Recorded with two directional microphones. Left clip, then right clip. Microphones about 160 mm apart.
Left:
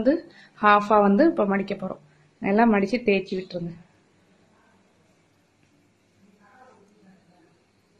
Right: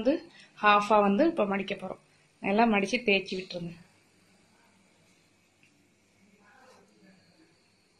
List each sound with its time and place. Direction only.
0.0 s speech: 15° left (ahead or behind)